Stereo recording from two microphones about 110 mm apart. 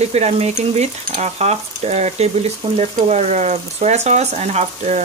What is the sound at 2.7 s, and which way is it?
Speech, 85° right.